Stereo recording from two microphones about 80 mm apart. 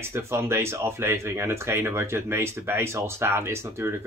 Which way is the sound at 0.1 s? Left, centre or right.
Right.